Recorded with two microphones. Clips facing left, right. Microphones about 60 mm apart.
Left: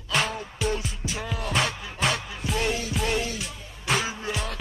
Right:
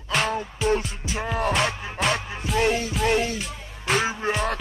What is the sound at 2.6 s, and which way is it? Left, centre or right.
Music, right.